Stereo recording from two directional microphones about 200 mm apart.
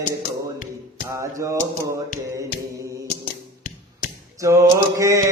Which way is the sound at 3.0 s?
40° left (ahead or behind).